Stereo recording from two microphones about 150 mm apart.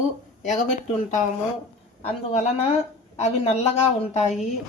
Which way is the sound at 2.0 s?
45° left (ahead or behind).